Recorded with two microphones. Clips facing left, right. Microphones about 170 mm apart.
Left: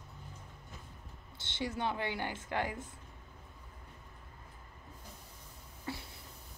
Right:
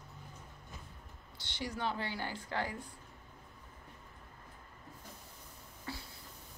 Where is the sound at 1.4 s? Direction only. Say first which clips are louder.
Left 2 dB; 25° left (ahead or behind).